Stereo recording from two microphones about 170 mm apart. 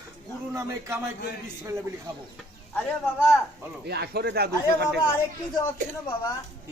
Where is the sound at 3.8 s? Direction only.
70° right (ahead or behind).